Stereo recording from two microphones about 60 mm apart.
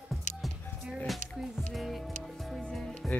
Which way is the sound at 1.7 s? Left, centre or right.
Centre.